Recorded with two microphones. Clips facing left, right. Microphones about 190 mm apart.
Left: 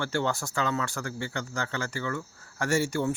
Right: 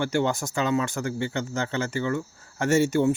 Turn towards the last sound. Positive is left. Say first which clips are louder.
# right 6 dB
turn(degrees=-20)  # may be behind; listen again after turning